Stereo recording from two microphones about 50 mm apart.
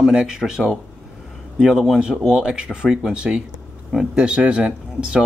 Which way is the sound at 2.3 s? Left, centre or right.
Centre.